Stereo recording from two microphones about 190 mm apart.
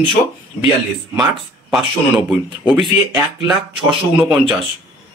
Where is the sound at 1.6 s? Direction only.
Centre (ahead or behind).